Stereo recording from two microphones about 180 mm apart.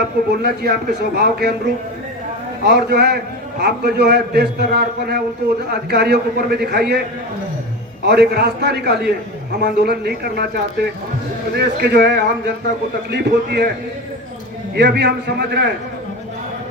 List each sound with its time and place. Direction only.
0.4 s a man's voice: 60° right (ahead or behind)
8.0 s a man's voice: 65° right (ahead or behind)
14.8 s a man's voice: 70° right (ahead or behind)